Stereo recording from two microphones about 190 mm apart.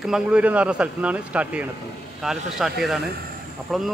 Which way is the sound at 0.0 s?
5° right (ahead or behind).